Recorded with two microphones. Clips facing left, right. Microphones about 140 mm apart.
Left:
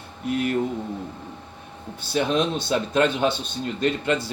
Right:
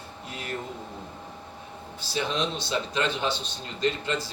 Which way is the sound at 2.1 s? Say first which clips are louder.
Left 6 dB; 55° left (ahead or behind).